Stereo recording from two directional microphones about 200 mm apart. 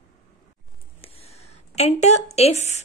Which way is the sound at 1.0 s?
30° left (ahead or behind).